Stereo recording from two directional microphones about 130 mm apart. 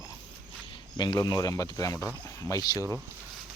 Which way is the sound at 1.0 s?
35° left (ahead or behind).